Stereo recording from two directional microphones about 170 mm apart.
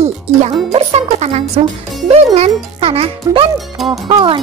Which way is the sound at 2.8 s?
35° right (ahead or behind).